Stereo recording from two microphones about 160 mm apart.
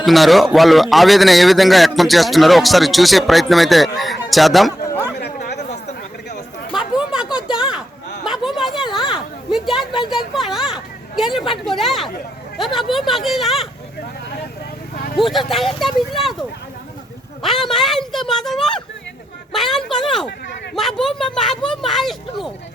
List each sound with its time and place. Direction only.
0.0 s a man's voice: centre (ahead or behind)
5.1 s chatter: 90° left
5.5 s chatter: 45° left (ahead or behind)
6.7 s chatter: 5° right (ahead or behind)
8.2 s a sound: centre (ahead or behind)
11.2 s vehicle: centre (ahead or behind)
11.6 s chatter: centre (ahead or behind)
12.5 s vehicle: centre (ahead or behind)
12.9 s a sound: centre (ahead or behind)
15.1 s a man's voice: centre (ahead or behind)
17.4 s a sound: centre (ahead or behind)
20.7 s speech: centre (ahead or behind)